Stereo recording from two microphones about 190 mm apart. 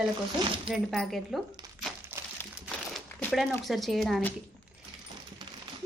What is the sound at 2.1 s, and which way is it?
Crumpling, 15° right (ahead or behind).